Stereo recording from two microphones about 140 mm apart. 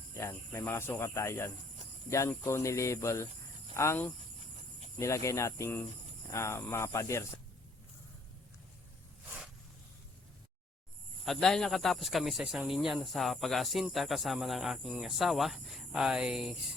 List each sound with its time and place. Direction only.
0.1 s speech: 20° left (ahead or behind)
11.3 s speech: 5° left (ahead or behind)